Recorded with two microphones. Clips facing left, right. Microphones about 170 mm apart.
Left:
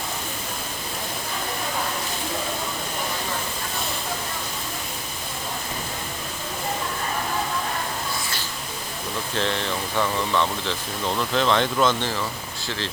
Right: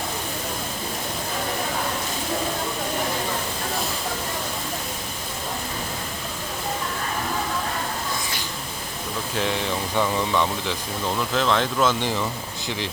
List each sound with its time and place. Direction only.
9.3 s speech: 10° right (ahead or behind)
11.2 s speech: centre (ahead or behind)
11.9 s speech: 15° right (ahead or behind)